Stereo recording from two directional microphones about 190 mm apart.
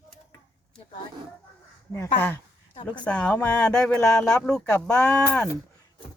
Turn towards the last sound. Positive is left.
turn(degrees=5)  # may be behind; listen again after turning